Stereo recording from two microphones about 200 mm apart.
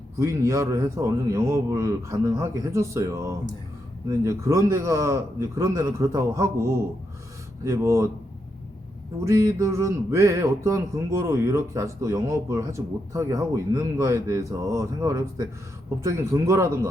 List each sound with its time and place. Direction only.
0.2 s speech: 15° right (ahead or behind)
9.2 s speech: 15° right (ahead or behind)